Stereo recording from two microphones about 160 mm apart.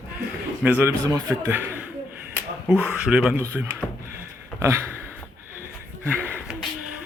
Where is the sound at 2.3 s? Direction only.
10° right (ahead or behind).